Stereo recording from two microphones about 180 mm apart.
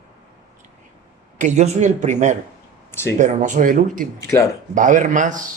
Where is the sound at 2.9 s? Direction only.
15° left (ahead or behind).